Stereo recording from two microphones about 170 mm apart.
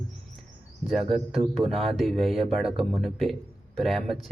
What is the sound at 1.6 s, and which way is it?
Speech, 35° right (ahead or behind).